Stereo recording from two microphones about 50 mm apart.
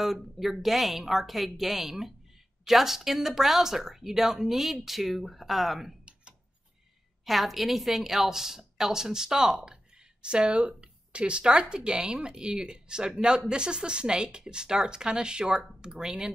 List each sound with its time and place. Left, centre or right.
0.0 s speech: centre
7.2 s a woman's voice: centre